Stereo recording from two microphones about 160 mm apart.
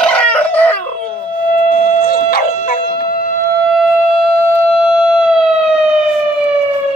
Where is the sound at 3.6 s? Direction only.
Centre (ahead or behind).